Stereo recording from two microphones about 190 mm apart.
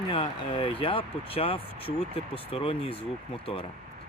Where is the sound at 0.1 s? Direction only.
30° left (ahead or behind).